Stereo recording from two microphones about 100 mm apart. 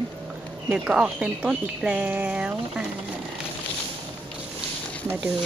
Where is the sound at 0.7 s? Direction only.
10° right (ahead or behind).